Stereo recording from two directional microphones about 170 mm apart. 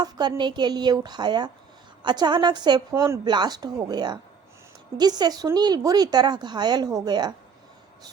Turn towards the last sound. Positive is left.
turn(degrees=-25)  # may be behind; listen again after turning